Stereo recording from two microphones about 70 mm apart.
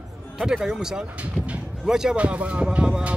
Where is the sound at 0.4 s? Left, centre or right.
Centre.